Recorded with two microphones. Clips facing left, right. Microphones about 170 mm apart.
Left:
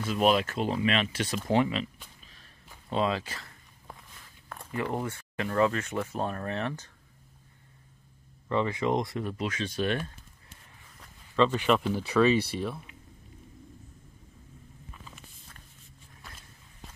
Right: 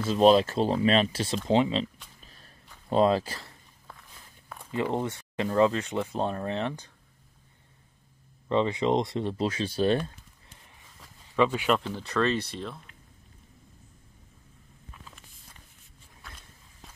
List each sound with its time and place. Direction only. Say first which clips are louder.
0.0 s speech: right 5 dB; 30° right (ahead or behind)
2.2 s a sound: right 3 dB; 40° right (ahead or behind)
2.9 s speech: right 6 dB; 40° right (ahead or behind)
4.7 s speech: right 3 dB; 20° right (ahead or behind)
8.5 s speech: right 3 dB; 20° right (ahead or behind)
11.0 s a sound: even; 10° right (ahead or behind)
11.8 s speech: left 4 dB; 10° left (ahead or behind)
16.2 s walk: right 1 dB; centre (ahead or behind)